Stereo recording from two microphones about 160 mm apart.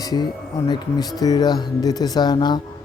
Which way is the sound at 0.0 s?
25° left (ahead or behind).